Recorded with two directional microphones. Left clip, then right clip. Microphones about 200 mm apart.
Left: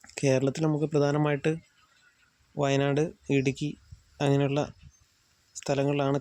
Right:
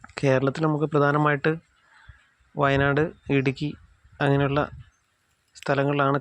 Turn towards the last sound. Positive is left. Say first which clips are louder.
# right 5 dB
turn(degrees=0)  # may be behind; listen again after turning